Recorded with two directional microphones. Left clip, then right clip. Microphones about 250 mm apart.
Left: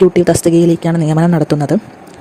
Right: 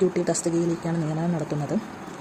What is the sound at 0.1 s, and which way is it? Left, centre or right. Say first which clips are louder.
Speech: left 14 dB; left.